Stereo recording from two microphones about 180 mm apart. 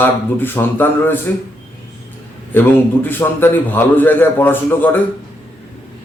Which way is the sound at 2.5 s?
10° left (ahead or behind).